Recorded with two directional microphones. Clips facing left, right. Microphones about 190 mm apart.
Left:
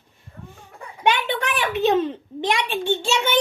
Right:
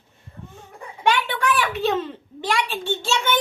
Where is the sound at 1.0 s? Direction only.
20° left (ahead or behind).